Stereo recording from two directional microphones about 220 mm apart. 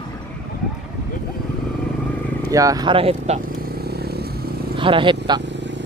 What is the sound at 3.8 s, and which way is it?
Vehicle, 45° right (ahead or behind).